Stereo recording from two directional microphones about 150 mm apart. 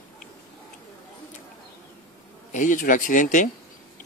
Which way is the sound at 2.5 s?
55° left (ahead or behind).